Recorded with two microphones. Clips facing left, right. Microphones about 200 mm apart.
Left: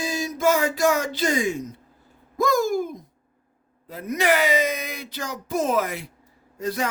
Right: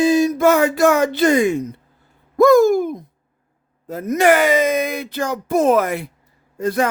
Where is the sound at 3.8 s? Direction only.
45° right (ahead or behind).